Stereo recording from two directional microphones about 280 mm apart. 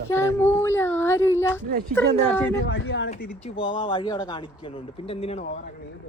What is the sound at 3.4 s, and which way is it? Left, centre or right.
Speech, centre.